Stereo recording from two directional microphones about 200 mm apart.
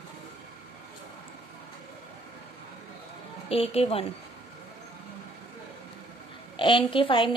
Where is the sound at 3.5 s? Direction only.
30° left (ahead or behind).